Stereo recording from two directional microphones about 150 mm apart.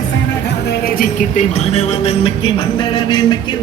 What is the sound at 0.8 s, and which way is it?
Speech, 65° left (ahead or behind).